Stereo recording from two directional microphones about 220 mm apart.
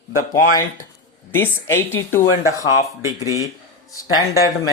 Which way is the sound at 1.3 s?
10° left (ahead or behind).